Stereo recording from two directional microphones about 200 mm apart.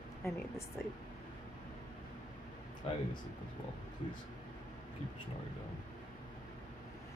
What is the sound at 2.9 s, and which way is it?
Speech, 30° left (ahead or behind).